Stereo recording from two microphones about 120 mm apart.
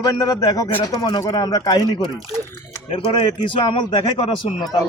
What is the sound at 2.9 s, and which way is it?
A man's voice, 50° left (ahead or behind).